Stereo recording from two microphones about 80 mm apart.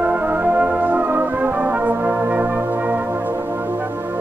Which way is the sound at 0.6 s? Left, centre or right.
Centre.